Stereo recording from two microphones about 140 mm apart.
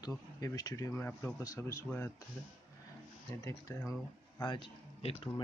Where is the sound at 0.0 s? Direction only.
25° left (ahead or behind).